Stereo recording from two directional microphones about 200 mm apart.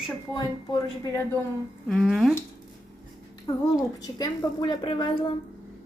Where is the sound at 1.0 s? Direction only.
15° left (ahead or behind).